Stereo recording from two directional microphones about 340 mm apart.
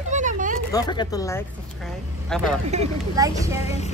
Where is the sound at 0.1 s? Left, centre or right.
Right.